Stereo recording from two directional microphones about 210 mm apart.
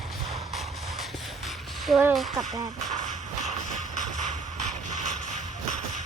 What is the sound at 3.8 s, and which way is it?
Shuffle, 35° left (ahead or behind).